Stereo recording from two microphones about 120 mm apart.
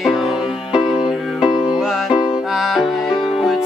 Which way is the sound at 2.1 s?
45° left (ahead or behind).